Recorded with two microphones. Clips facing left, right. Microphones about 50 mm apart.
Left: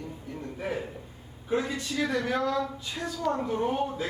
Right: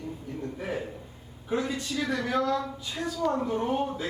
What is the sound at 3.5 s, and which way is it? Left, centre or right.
Speech, right.